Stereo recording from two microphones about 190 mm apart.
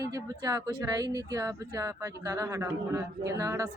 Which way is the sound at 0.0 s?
20° right (ahead or behind).